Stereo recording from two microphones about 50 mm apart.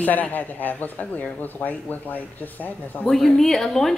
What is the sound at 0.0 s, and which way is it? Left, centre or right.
Speech, left.